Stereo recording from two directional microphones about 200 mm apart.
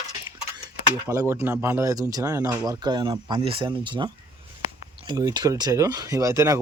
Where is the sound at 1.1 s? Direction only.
10° right (ahead or behind).